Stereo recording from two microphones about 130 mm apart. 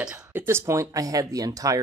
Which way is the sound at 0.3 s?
20° right (ahead or behind).